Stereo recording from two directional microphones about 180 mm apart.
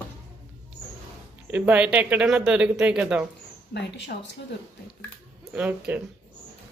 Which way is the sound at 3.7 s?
75° left (ahead or behind).